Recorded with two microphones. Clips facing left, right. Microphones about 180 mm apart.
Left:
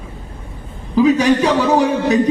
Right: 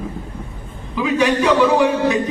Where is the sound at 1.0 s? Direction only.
40° left (ahead or behind).